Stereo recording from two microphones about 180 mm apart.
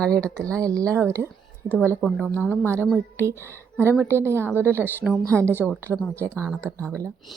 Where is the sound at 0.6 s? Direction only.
20° right (ahead or behind).